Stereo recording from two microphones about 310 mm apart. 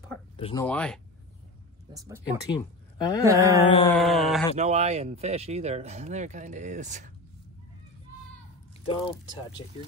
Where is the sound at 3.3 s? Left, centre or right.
Centre.